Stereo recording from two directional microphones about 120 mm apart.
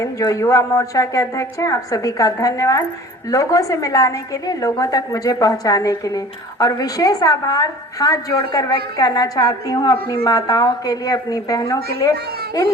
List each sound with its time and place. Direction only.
0.0 s a woman's voice: 25° left (ahead or behind)